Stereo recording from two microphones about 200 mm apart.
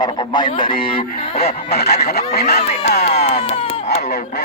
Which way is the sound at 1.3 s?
50° left (ahead or behind).